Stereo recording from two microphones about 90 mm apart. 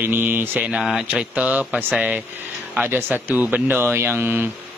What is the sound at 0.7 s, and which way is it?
A man's voice, 5° right (ahead or behind).